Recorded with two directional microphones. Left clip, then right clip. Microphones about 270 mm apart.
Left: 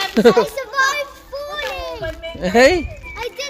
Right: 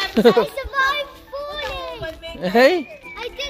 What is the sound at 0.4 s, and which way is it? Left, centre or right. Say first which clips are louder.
Children playing: left 2 dB; centre.